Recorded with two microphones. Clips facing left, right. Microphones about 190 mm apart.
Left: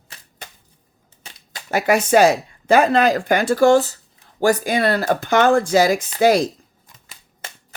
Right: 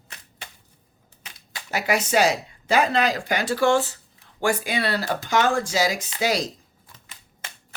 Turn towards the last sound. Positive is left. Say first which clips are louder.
# left 9 dB
turn(degrees=50)  # may be behind; listen again after turning